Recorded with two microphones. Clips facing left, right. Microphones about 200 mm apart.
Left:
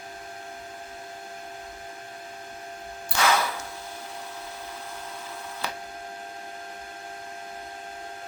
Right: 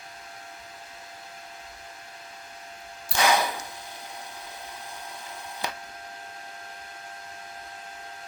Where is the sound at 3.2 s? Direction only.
15° right (ahead or behind).